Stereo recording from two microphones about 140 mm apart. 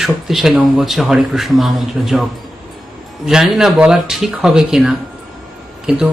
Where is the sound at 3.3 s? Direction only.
5° right (ahead or behind).